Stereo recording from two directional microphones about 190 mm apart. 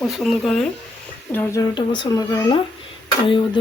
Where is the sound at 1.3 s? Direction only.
10° left (ahead or behind).